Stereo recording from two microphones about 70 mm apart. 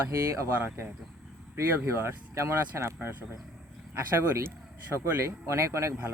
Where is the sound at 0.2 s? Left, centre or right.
Right.